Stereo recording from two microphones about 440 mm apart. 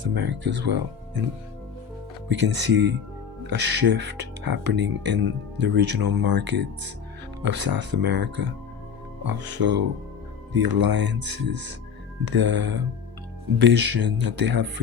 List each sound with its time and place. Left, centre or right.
0.0 s speech: right
2.3 s speech: right